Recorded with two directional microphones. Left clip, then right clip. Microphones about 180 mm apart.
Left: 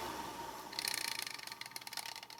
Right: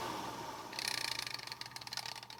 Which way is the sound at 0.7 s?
Centre (ahead or behind).